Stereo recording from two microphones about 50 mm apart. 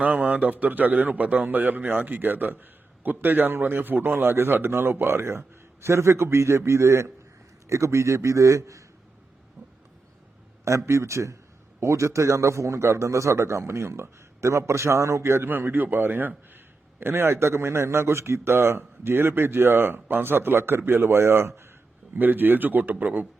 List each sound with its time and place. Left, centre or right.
0.0 s a man's voice: right
10.7 s a man's voice: right
11.8 s a man's voice: right
15.4 s speech: right
17.0 s a man's voice: right
22.1 s a man's voice: right